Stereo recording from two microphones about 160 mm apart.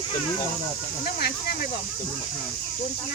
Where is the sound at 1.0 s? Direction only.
80° left.